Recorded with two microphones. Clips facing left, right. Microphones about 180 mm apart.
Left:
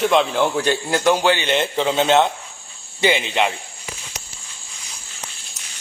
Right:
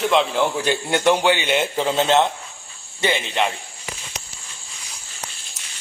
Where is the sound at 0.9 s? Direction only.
25° right (ahead or behind).